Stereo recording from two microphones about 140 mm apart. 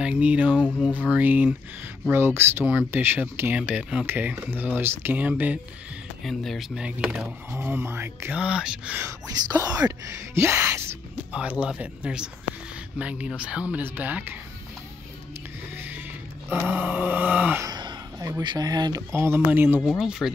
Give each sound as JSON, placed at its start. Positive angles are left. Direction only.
{"t": 0.0, "sound": "speech", "side_deg": -10}
{"t": 6.2, "sound": "speech", "side_deg": 0}
{"t": 7.5, "sound": "speech", "side_deg": -15}
{"t": 9.0, "sound": "speech", "side_deg": -25}
{"t": 11.3, "sound": "speech", "side_deg": -10}
{"t": 12.5, "sound": "a sound", "side_deg": 55}
{"t": 13.0, "sound": "speech", "side_deg": -10}
{"t": 15.7, "sound": "music", "side_deg": -15}
{"t": 16.6, "sound": "speech", "side_deg": -10}
{"t": 17.6, "sound": "a sound", "side_deg": -30}
{"t": 18.4, "sound": "speech", "side_deg": -30}
{"t": 20.0, "sound": "speech", "side_deg": -5}